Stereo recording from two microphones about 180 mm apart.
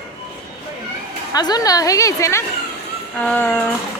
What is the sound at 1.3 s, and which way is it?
A woman's voice, 20° left (ahead or behind).